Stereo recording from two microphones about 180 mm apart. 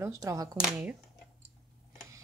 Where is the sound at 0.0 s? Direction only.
15° right (ahead or behind).